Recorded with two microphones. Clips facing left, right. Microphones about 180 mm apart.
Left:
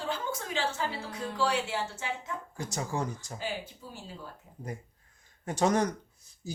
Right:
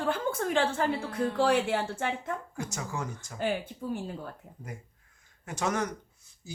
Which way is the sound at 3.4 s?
55° right (ahead or behind).